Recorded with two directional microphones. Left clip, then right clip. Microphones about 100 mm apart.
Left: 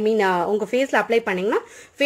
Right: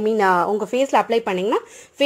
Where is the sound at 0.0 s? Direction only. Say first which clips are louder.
Right 2 dB; 35° right (ahead or behind).